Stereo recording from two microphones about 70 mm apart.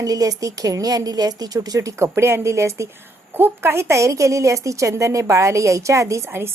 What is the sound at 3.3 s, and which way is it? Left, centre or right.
A woman's voice, right.